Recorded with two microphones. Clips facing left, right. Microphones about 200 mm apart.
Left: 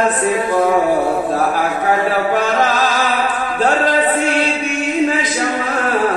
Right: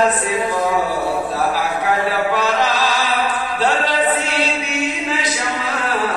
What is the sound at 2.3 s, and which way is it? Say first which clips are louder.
Chant: left 2 dB; 50° left (ahead or behind).